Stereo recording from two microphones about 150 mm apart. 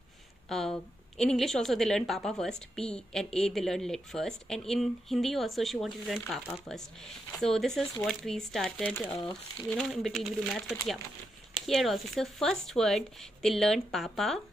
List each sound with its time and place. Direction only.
0.5 s a woman's voice: centre (ahead or behind)
9.2 s speech: 25° left (ahead or behind)
9.7 s a woman's voice: 5° left (ahead or behind)
11.6 s a woman's voice: centre (ahead or behind)